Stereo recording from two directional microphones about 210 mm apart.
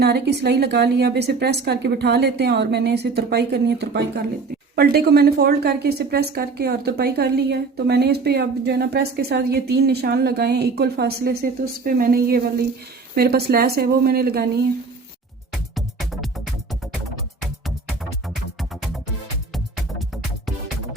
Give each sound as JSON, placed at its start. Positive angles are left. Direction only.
{"t": 0.0, "sound": "a woman's voice", "side_deg": -50}
{"t": 15.7, "sound": "music", "side_deg": 0}
{"t": 19.5, "sound": "music", "side_deg": 0}